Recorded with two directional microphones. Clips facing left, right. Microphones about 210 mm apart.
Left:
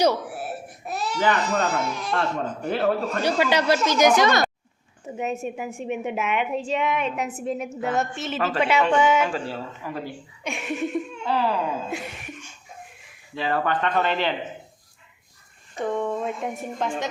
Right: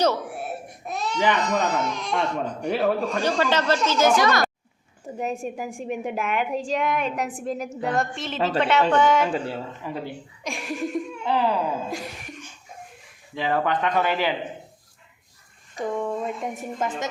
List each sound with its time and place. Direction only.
0.0 s baby cry: 5° left (ahead or behind)
1.6 s a man's voice: 10° left (ahead or behind)
5.0 s a man's voice: 5° left (ahead or behind)
9.3 s speech: 20° right (ahead or behind)
10.4 s laughter: 5° left (ahead or behind)
11.3 s speech: 15° right (ahead or behind)
13.3 s speech: 15° right (ahead or behind)
15.8 s a man's voice: 5° right (ahead or behind)